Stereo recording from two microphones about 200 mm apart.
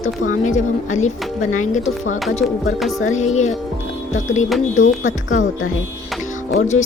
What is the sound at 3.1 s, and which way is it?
Speech, 35° left (ahead or behind).